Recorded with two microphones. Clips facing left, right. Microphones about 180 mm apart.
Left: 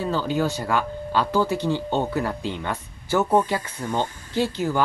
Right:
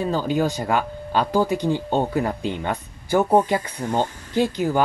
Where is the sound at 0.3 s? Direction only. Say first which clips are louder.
Right 3 dB; 15° right (ahead or behind).